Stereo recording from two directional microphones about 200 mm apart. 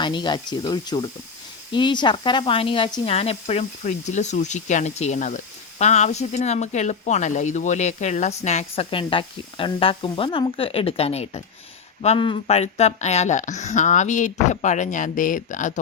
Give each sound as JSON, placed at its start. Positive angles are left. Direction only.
{"t": 0.0, "sound": "speech", "side_deg": 20}